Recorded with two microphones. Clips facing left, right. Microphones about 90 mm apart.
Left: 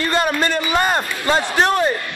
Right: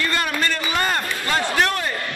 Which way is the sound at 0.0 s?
25° left (ahead or behind).